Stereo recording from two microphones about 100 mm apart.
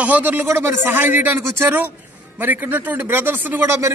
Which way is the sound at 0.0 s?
15° right (ahead or behind).